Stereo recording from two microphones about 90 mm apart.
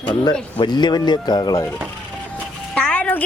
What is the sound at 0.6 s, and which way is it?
Speech, 55° left (ahead or behind).